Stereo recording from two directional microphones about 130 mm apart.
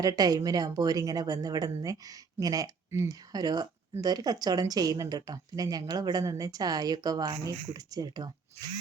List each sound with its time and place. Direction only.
0.0 s a woman's voice: 30° right (ahead or behind)